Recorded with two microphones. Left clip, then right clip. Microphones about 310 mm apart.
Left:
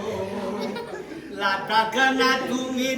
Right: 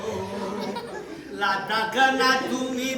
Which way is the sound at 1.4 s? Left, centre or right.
Centre.